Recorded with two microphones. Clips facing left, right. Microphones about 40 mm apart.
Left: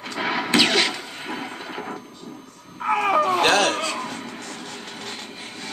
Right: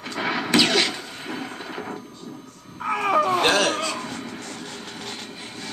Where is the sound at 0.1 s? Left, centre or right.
Centre.